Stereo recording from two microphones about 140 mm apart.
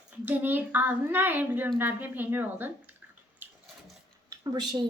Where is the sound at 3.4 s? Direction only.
15° right (ahead or behind).